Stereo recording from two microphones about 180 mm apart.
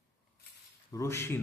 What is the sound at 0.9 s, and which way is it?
Speech, 15° left (ahead or behind).